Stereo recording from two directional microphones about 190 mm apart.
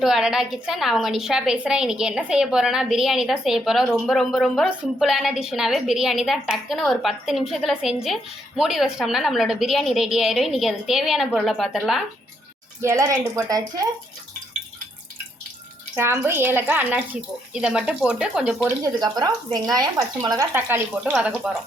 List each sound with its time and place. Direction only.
0.0 s a woman's voice: centre (ahead or behind)
12.8 s speech: 15° right (ahead or behind)
16.0 s speech: 15° right (ahead or behind)
18.8 s speech: 20° right (ahead or behind); by 21.5 s 5° right (ahead or behind)